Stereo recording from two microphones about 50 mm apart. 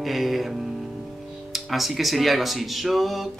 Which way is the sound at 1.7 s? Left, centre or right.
Centre.